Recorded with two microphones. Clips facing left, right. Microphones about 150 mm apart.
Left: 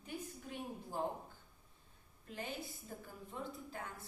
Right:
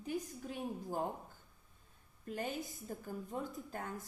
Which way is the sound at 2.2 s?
45° right (ahead or behind).